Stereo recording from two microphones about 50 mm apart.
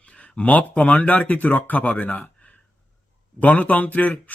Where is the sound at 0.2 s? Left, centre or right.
Left.